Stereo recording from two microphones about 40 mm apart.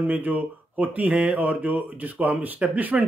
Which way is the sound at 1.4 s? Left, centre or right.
Right.